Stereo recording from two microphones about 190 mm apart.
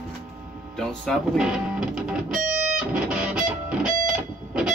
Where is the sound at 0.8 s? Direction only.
5° left (ahead or behind).